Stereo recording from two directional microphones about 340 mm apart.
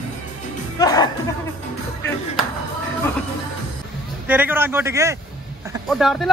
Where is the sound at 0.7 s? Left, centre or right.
Centre.